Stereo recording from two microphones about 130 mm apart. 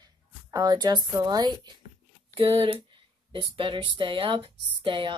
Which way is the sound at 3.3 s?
40° right (ahead or behind).